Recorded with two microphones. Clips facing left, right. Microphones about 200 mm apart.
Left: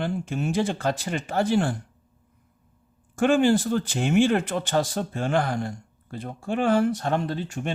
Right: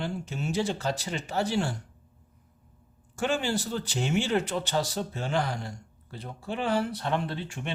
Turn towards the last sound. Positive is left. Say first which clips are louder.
# left 5 dB
turn(degrees=40)  # may be behind; listen again after turning